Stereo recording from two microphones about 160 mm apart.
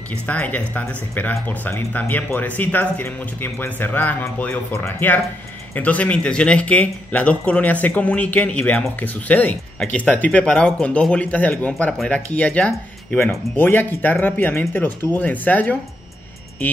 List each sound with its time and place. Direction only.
0.3 s speech: 10° left (ahead or behind)